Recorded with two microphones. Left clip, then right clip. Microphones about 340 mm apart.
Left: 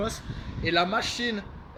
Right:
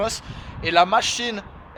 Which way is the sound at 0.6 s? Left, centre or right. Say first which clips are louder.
Right 8 dB; centre.